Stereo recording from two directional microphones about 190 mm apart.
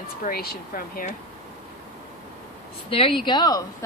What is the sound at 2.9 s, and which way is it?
Speech, 30° left (ahead or behind).